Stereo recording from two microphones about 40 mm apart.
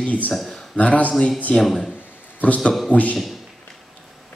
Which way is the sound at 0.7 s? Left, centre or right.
Left.